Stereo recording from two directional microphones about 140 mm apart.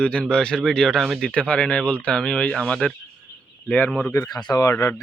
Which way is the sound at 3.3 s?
15° left (ahead or behind).